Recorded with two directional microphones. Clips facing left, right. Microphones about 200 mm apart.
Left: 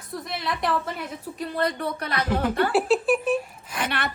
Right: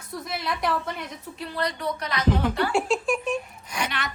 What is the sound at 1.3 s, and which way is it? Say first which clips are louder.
Speech: left 3 dB; 45° left (ahead or behind).